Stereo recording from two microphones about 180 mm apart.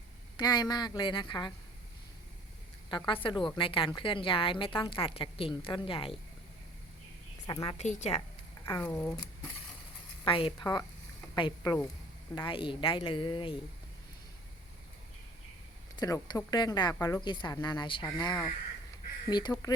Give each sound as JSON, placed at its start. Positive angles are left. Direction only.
{"t": 0.3, "sound": "a woman's voice", "side_deg": 20}
{"t": 2.9, "sound": "a woman's voice", "side_deg": 30}
{"t": 7.4, "sound": "a woman's voice", "side_deg": 25}
{"t": 7.8, "sound": "a woman's voice", "side_deg": 40}
{"t": 8.6, "sound": "speech", "side_deg": 15}
{"t": 10.2, "sound": "a woman's voice", "side_deg": 30}
{"t": 16.0, "sound": "a woman's voice", "side_deg": 20}